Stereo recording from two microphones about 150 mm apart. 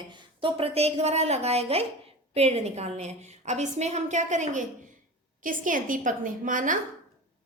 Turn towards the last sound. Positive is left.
turn(degrees=-60)  # may be behind; listen again after turning